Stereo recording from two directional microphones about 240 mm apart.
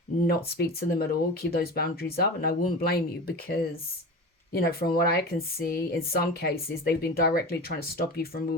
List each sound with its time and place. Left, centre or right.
0.3 s speech: left